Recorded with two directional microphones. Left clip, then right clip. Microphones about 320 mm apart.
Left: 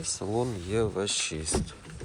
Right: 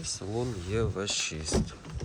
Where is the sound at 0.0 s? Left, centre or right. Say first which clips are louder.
Left 4 dB; centre.